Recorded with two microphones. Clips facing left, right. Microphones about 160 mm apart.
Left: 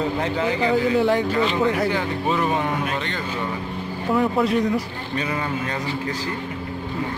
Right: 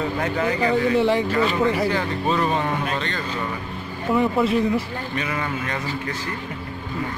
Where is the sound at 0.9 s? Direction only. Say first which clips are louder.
Even; centre (ahead or behind).